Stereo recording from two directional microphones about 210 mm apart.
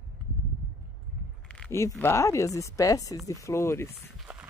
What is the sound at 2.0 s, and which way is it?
Speech, 15° left (ahead or behind).